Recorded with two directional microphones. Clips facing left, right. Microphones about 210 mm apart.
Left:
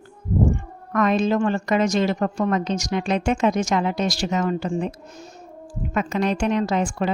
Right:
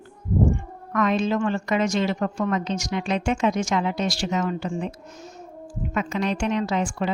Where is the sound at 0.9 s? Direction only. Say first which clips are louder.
Left 3 dB; 40° left (ahead or behind).